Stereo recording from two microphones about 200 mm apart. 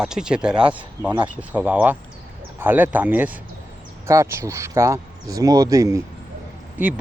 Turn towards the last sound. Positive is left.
turn(degrees=-10)  # may be behind; listen again after turning